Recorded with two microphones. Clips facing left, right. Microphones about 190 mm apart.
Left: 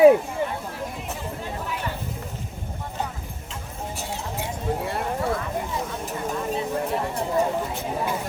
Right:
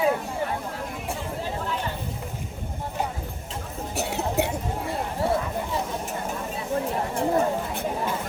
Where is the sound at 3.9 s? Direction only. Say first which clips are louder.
Right 9 dB; 70° right (ahead or behind).